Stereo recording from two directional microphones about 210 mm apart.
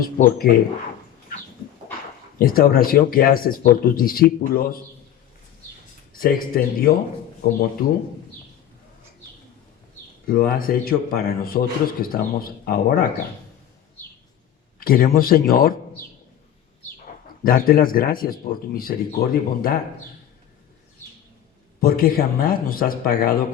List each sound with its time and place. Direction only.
0.0 s speech: 45° left (ahead or behind)
2.4 s speech: 45° left (ahead or behind)
6.1 s speech: 45° left (ahead or behind)
10.2 s speech: 40° left (ahead or behind)
14.8 s speech: 45° left (ahead or behind)
17.4 s speech: 45° left (ahead or behind)
21.8 s speech: 45° left (ahead or behind)